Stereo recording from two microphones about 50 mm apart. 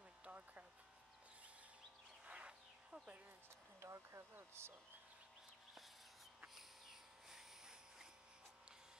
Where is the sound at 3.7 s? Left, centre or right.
Right.